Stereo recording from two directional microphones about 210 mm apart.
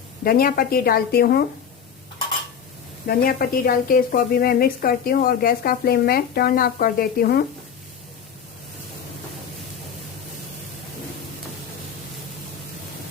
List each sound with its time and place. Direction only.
0.3 s a woman's voice: 45° left (ahead or behind)
3.1 s a woman's voice: 45° left (ahead or behind)